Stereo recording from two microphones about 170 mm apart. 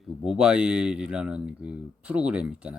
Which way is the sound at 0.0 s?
Centre (ahead or behind).